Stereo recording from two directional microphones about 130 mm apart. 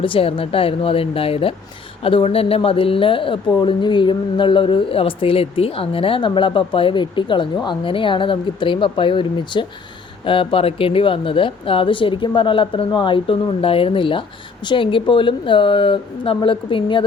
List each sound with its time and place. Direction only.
0.0 s speech: 45° left (ahead or behind)